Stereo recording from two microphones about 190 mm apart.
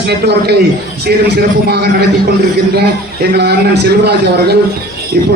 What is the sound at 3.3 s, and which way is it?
A man's voice, 60° right (ahead or behind).